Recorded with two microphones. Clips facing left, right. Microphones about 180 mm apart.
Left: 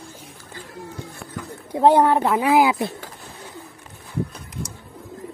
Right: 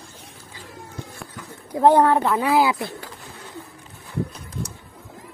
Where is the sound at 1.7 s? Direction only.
20° left (ahead or behind).